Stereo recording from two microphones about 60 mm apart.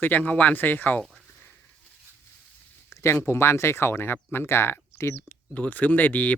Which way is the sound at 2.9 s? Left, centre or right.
Left.